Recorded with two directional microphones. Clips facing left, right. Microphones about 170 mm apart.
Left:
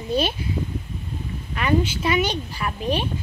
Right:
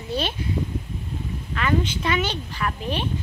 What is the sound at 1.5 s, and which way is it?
Speech, 10° left (ahead or behind).